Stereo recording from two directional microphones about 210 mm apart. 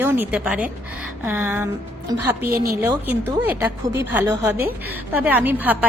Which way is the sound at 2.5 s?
45° right (ahead or behind).